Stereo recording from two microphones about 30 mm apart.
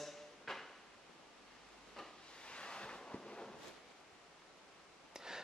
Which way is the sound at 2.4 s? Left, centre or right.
Left.